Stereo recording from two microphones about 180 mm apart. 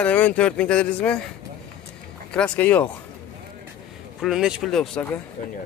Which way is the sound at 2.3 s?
5° left (ahead or behind).